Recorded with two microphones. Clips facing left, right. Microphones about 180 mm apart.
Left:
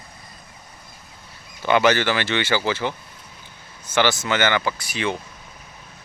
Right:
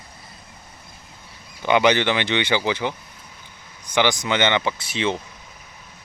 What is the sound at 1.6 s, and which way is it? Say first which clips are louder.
Speech: even; 15° right (ahead or behind).